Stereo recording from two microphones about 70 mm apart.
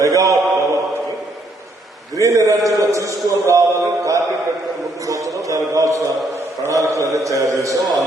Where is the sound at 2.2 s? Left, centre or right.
Right.